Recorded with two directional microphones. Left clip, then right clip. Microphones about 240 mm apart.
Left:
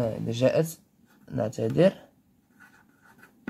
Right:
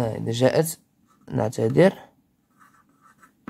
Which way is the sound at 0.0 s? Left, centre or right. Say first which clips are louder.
Right 3 dB; right.